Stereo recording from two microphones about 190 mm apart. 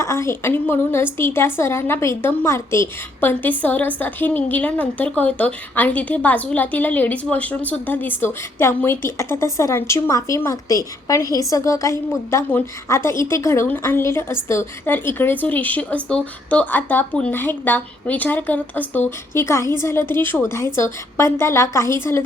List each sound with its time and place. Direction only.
0.0 s a woman's voice: 15° left (ahead or behind)